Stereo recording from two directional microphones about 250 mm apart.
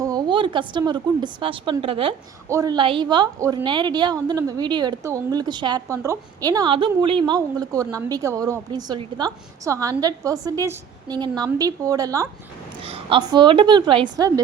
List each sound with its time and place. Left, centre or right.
0.0 s a woman's voice: centre